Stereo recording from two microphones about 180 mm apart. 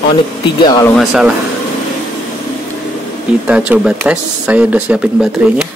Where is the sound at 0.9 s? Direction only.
5° right (ahead or behind).